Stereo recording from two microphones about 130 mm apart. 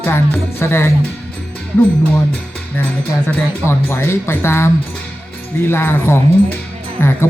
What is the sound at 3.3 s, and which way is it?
Speech, 20° left (ahead or behind).